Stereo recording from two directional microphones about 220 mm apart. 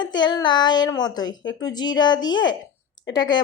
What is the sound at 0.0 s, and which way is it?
Speech, 20° left (ahead or behind).